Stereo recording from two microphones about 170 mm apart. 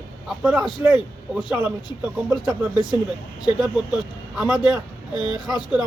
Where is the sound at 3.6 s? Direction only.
5° right (ahead or behind).